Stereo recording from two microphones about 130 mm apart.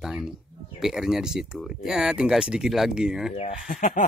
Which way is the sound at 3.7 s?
90° left.